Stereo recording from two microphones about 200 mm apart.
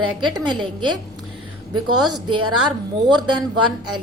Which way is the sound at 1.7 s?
90° right.